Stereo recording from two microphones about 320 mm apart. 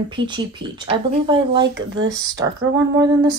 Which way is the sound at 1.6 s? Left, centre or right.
Right.